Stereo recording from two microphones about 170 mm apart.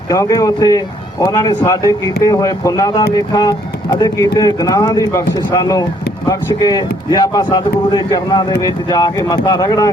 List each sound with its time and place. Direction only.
0.1 s speech: 20° left (ahead or behind)